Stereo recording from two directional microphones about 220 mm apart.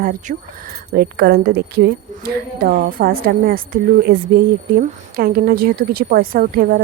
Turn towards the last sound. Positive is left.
turn(degrees=-40)  # may be behind; listen again after turning